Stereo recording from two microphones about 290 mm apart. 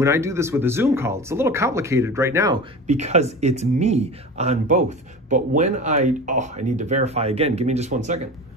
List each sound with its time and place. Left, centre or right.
0.0 s speech: centre
2.9 s speech: right